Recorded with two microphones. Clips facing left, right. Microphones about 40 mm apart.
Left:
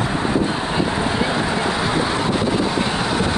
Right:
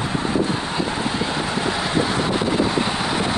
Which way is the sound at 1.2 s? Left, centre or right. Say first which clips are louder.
Left 3 dB; centre.